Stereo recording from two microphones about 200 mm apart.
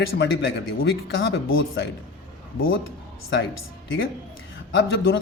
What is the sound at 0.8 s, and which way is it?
Speech, 60° left (ahead or behind).